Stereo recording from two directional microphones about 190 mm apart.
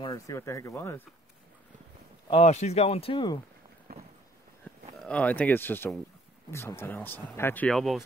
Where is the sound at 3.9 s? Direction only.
50° right (ahead or behind).